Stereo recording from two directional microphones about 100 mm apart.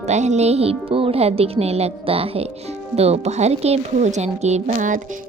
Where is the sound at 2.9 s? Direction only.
90° right.